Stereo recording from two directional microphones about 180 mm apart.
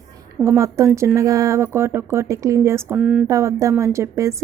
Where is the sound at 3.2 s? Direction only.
15° right (ahead or behind).